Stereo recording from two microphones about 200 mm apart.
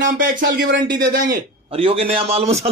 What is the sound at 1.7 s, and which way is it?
Speech, 30° right (ahead or behind).